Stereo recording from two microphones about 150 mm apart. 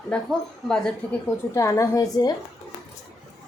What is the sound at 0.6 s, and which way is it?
Speech, 5° left (ahead or behind).